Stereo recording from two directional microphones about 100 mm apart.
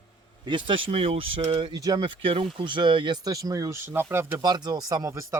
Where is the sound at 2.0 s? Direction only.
65° right (ahead or behind).